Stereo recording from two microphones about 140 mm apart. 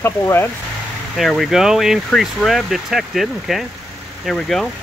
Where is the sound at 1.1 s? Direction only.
Centre (ahead or behind).